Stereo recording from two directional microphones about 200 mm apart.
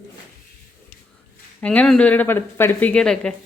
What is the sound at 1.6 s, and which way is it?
Speech, 5° left (ahead or behind).